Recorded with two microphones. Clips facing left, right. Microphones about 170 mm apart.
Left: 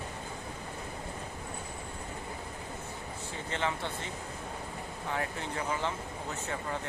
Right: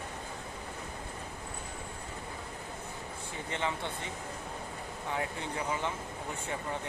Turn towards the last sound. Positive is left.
turn(degrees=-20)  # may be behind; listen again after turning